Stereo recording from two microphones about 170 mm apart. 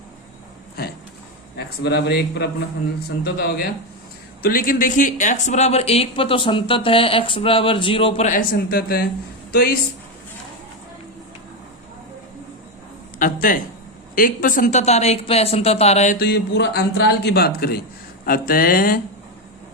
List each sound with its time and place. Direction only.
1.5 s a man's voice: 75° left (ahead or behind); by 8.3 s 35° left (ahead or behind)
8.3 s speech: 55° left (ahead or behind)
13.1 s a sound: 55° left (ahead or behind)
14.2 s speech: 55° left (ahead or behind)
16.1 s a man's voice: 75° left (ahead or behind)